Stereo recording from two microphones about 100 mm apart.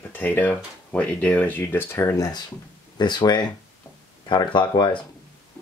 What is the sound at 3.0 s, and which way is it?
Speech, 45° left (ahead or behind).